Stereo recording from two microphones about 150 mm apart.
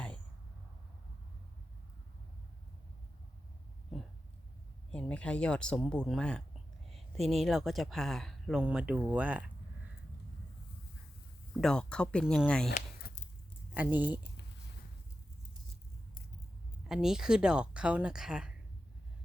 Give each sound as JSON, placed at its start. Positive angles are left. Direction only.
{"t": 3.9, "sound": "a sound", "side_deg": 0}
{"t": 4.9, "sound": "speech", "side_deg": 10}
{"t": 11.6, "sound": "speech", "side_deg": 5}
{"t": 13.0, "sound": "a sound", "side_deg": 80}
{"t": 13.7, "sound": "speech", "side_deg": -10}
{"t": 16.9, "sound": "speech", "side_deg": -5}